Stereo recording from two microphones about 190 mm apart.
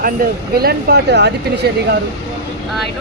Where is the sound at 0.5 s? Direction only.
55° right (ahead or behind).